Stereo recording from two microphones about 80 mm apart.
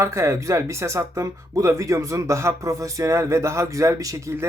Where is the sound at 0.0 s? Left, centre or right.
Right.